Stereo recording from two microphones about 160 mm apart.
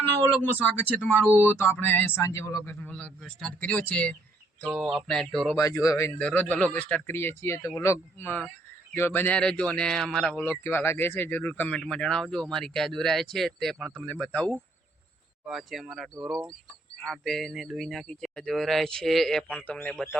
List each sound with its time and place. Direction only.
0.0 s a man's voice: 10° left (ahead or behind)
4.6 s a man's voice: 10° right (ahead or behind)
5.5 s a man's voice: 20° left (ahead or behind)